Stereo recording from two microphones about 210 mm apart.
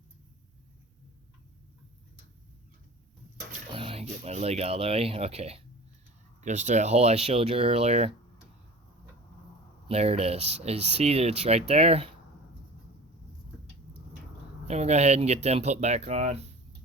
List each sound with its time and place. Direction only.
3.7 s speech: 25° right (ahead or behind)
9.9 s speech: 30° right (ahead or behind)
14.7 s speech: 30° right (ahead or behind)